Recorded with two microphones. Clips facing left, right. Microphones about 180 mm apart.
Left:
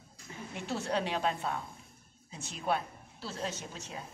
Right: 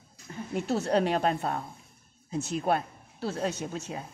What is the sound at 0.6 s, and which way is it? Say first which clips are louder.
A woman's voice: right 8 dB; 40° right (ahead or behind).